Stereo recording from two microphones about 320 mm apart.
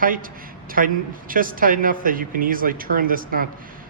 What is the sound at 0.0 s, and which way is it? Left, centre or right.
A man's voice, right.